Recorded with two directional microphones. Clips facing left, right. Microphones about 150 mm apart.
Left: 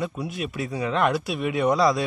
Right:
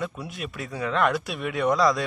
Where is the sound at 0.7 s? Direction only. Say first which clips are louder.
Even; 20° left (ahead or behind).